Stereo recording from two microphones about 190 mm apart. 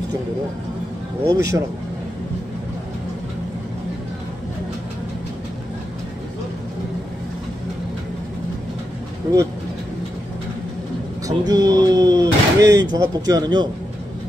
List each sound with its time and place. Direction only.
1.2 s speech: 15° right (ahead or behind)
11.2 s speech: 20° right (ahead or behind)